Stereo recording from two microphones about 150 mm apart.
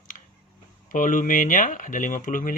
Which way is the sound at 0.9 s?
60° left (ahead or behind).